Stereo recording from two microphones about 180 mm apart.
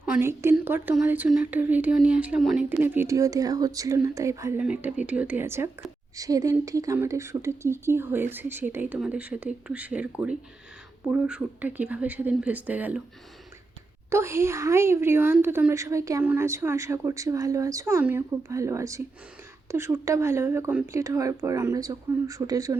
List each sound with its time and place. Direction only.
0.1 s a woman's voice: 15° right (ahead or behind)
14.1 s a woman's voice: 15° right (ahead or behind)